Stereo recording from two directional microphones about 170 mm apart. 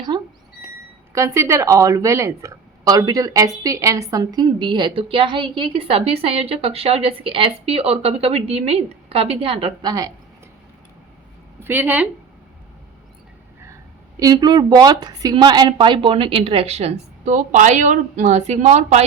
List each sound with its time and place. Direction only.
1.1 s a woman's voice: 15° right (ahead or behind)
11.6 s a woman's voice: 10° right (ahead or behind)
14.2 s speech: 25° right (ahead or behind); by 19.0 s 40° right (ahead or behind)